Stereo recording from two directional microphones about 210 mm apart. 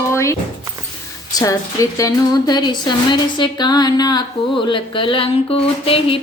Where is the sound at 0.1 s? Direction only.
15° left (ahead or behind).